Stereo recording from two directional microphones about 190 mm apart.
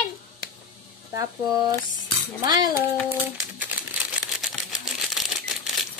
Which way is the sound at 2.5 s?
20° right (ahead or behind).